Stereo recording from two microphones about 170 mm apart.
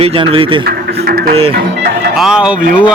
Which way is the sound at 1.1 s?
65° right (ahead or behind).